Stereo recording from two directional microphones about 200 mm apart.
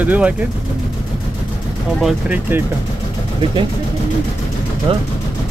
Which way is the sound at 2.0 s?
10° right (ahead or behind).